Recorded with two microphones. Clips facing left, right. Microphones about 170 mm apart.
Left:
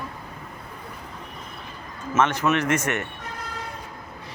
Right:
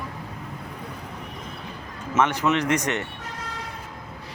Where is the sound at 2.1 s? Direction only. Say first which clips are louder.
Even; 15° right (ahead or behind).